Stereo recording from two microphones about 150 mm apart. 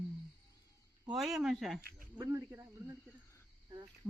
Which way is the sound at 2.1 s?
20° right (ahead or behind).